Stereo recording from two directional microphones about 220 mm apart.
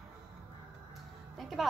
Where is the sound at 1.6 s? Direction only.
Centre (ahead or behind).